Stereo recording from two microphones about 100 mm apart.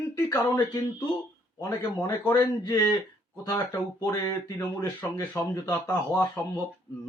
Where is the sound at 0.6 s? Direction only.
45° left (ahead or behind).